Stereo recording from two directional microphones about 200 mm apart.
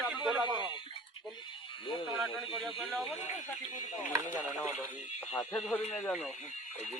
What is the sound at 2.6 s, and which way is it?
Speech, centre (ahead or behind).